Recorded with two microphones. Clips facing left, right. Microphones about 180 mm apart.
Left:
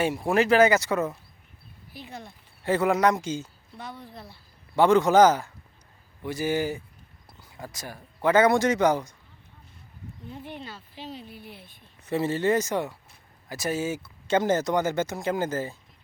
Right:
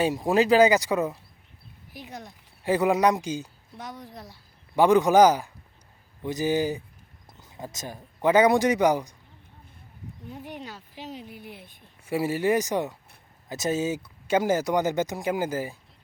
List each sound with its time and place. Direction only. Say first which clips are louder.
0.0 s speech: right 1 dB; 15° right (ahead or behind)
10.2 s speech: right 1 dB; 10° right (ahead or behind)